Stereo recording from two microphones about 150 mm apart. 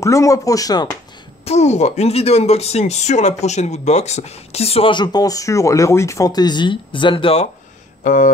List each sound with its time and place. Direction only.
0.0 s speech: 20° left (ahead or behind)
1.4 s speech: 45° left (ahead or behind)
8.0 s speech: 60° left (ahead or behind)